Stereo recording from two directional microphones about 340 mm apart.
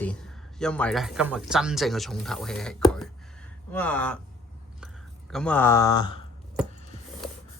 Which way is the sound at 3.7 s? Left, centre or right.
Centre.